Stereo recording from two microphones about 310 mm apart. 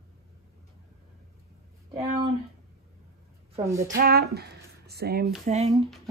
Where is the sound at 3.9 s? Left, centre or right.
Right.